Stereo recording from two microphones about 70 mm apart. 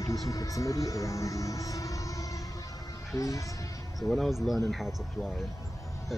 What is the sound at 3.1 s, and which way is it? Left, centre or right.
Speech, left.